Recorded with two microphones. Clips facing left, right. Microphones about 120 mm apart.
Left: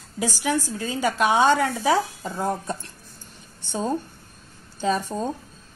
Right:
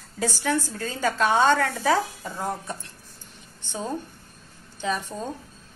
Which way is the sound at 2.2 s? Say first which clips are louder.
Left 4 dB; 25° left (ahead or behind).